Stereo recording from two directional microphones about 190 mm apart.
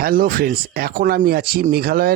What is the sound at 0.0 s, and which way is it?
Speech, 50° right (ahead or behind).